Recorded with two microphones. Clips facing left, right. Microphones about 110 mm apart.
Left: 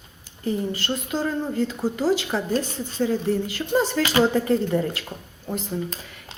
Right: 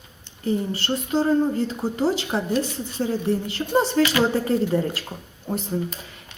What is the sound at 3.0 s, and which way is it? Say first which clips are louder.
Speech: left 1 dB; 30° right (ahead or behind).